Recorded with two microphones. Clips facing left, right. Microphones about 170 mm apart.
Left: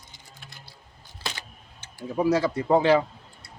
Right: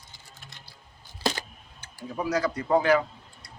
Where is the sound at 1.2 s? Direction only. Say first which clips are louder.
Right 8 dB; 40° right (ahead or behind).